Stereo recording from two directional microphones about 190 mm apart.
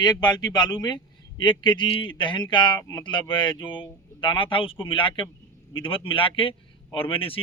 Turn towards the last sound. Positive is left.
turn(degrees=30)  # may be behind; listen again after turning